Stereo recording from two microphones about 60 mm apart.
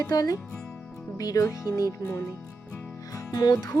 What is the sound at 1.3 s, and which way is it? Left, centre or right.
Speech, left.